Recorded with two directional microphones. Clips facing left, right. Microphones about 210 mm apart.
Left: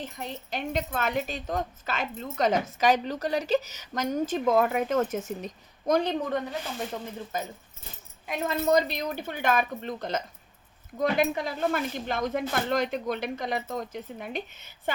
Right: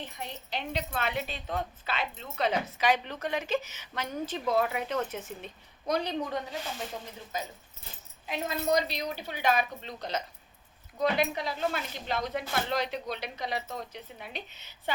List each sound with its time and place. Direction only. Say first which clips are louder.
0.0 s a woman's voice: left 4 dB; 45° left (ahead or behind)